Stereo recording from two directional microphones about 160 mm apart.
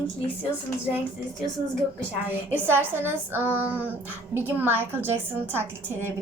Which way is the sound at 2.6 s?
15° right (ahead or behind).